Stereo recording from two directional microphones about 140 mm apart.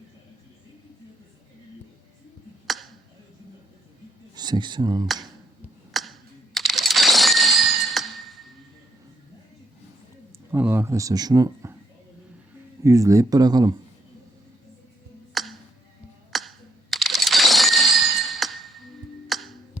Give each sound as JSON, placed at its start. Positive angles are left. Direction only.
{"t": 2.6, "sound": "finger snapping", "side_deg": 0}
{"t": 4.4, "sound": "speech", "side_deg": -30}
{"t": 5.9, "sound": "a sound", "side_deg": 0}
{"t": 10.5, "sound": "speech", "side_deg": -15}
{"t": 12.8, "sound": "speech", "side_deg": -25}
{"t": 15.4, "sound": "music", "side_deg": 0}
{"t": 16.3, "sound": "a sound", "side_deg": 0}
{"t": 19.3, "sound": "music", "side_deg": 0}